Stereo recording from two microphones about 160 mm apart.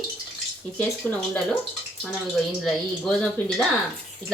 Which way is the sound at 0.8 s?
10° left (ahead or behind).